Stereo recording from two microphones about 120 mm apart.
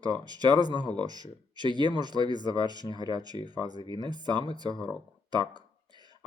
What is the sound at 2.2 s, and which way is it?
Speech, 40° left (ahead or behind).